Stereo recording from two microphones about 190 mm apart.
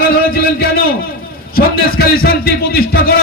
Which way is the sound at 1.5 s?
55° left (ahead or behind).